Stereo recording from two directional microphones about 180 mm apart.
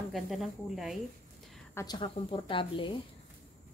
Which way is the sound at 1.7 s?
25° left (ahead or behind).